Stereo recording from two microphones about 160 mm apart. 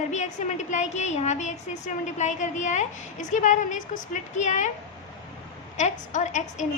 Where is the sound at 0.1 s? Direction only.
45° left (ahead or behind).